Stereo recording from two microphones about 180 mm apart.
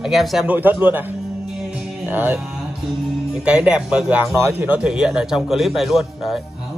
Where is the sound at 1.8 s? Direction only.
5° right (ahead or behind).